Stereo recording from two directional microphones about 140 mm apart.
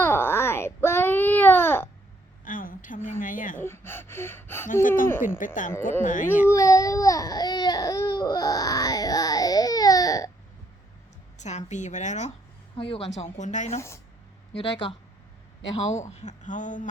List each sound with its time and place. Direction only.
0.0 s baby cry: 15° left (ahead or behind)
2.4 s a sound: 75° left (ahead or behind)
3.6 s gasp: 15° left (ahead or behind)
4.7 s speech: 70° left (ahead or behind)
6.5 s baby cry: 20° left (ahead or behind)
11.3 s speech: 60° left (ahead or behind)
12.7 s a woman's voice: 40° left (ahead or behind); by 13.7 s 60° left (ahead or behind)
13.7 s speech: 20° left (ahead or behind)
14.5 s speech: 40° left (ahead or behind)
15.7 s speech: 55° left (ahead or behind)